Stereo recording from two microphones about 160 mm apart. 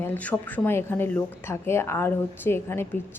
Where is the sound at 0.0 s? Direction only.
10° left (ahead or behind).